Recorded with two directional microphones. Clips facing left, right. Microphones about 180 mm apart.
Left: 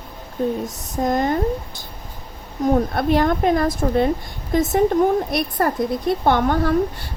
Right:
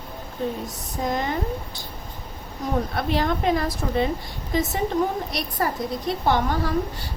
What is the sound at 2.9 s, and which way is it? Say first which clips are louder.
A woman's voice: left 6 dB; 50° left (ahead or behind).